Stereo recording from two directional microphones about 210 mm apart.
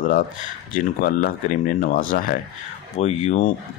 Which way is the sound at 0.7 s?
45° left (ahead or behind).